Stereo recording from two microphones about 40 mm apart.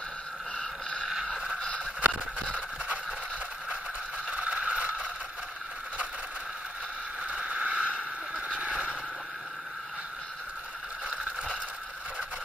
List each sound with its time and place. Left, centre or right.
0.6 s vehicle: left
2.0 s vehicle: right
4.3 s scrape: right
7.4 s a sound: right